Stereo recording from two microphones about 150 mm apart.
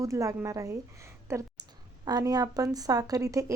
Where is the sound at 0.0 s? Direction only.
20° right (ahead or behind).